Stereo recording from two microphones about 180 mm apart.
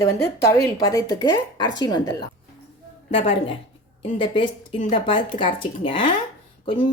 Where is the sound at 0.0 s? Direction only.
15° left (ahead or behind).